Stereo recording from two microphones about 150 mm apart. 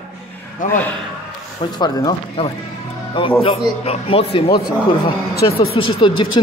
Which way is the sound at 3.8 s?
40° left (ahead or behind).